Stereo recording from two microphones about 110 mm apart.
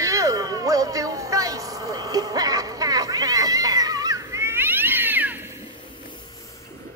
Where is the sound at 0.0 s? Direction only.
30° right (ahead or behind).